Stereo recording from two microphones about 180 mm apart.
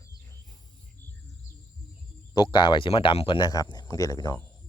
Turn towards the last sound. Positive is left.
turn(degrees=20)  # may be behind; listen again after turning